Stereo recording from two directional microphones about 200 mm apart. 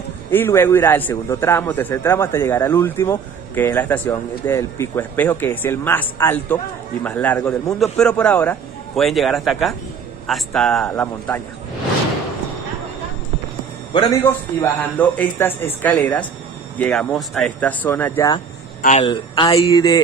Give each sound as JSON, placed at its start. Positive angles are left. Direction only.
{"t": 0.3, "sound": "a man's voice", "side_deg": 10}
{"t": 14.1, "sound": "a man's voice", "side_deg": 10}
{"t": 18.8, "sound": "speech", "side_deg": 40}
{"t": 19.0, "sound": "speech", "side_deg": 25}